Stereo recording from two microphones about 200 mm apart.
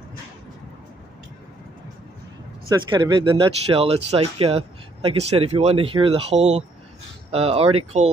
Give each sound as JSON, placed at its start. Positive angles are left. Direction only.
{"t": 2.9, "sound": "speech", "side_deg": -25}